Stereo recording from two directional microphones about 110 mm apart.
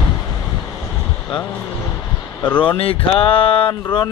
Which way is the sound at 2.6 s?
55° left (ahead or behind).